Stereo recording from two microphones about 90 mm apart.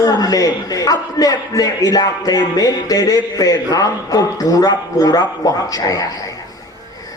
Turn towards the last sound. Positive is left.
turn(degrees=40)  # may be behind; listen again after turning